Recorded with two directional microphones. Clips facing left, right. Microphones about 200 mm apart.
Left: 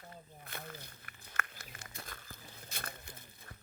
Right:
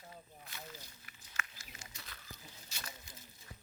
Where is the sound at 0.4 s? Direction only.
55° left (ahead or behind).